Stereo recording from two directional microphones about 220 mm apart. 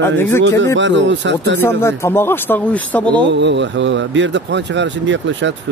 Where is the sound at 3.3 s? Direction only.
55° right (ahead or behind).